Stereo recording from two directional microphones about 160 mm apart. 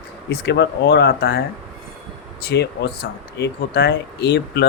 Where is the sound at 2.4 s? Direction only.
90° left.